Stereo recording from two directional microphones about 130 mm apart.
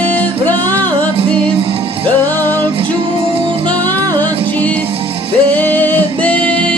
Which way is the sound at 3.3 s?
40° right (ahead or behind).